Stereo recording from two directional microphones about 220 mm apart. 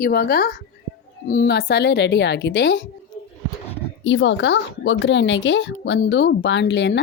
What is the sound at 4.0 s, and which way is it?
A woman's voice, 55° left (ahead or behind).